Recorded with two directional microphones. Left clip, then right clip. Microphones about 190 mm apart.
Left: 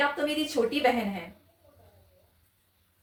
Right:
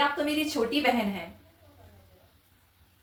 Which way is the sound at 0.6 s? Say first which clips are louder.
Left 5 dB; 20° left (ahead or behind).